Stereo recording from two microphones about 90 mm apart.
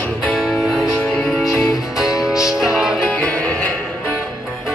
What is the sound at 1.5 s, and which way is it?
Music, 35° left (ahead or behind).